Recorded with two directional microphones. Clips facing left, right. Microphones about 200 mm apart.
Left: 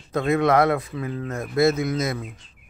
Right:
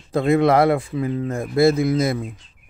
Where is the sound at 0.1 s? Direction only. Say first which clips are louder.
Right 3 dB; 30° right (ahead or behind).